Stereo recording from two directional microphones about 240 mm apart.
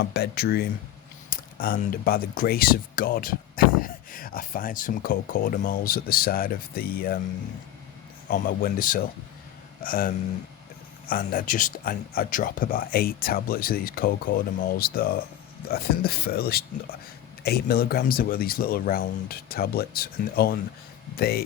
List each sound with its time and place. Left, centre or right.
0.0 s speech: left
8.3 s speech: left
11.1 s speech: left